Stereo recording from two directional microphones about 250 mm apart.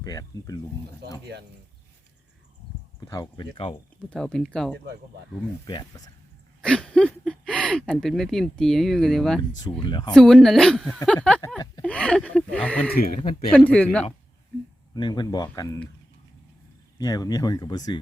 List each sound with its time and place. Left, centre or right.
0.0 s speech: centre
1.0 s speech: right
3.1 s speech: centre
4.1 s speech: centre
5.6 s speech: centre
6.6 s speech: centre
9.8 s speech: centre
10.2 s speech: centre
14.9 s speech: centre
17.0 s speech: centre